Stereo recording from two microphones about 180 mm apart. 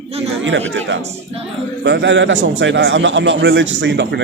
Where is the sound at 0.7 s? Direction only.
90° right.